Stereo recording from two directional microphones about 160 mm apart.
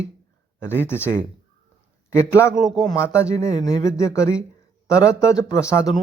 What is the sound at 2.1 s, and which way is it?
Speech, 15° left (ahead or behind).